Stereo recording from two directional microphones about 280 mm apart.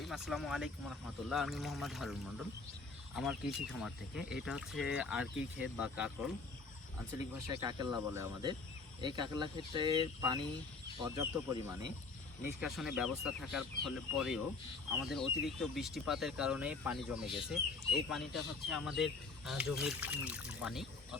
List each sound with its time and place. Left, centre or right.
0.0 s speech: centre
3.2 s speech: centre
7.6 s speech: centre